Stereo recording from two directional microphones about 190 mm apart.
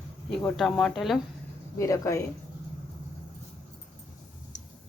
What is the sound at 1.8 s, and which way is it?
Speech, 15° left (ahead or behind).